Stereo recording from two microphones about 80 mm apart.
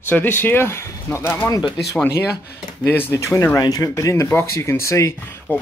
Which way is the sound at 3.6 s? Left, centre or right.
Left.